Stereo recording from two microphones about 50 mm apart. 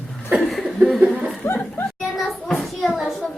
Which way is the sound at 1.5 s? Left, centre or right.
Left.